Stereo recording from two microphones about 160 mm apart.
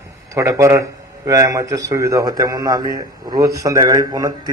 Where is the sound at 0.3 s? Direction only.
20° right (ahead or behind).